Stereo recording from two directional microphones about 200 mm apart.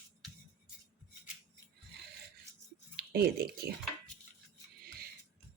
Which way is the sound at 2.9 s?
50° right (ahead or behind).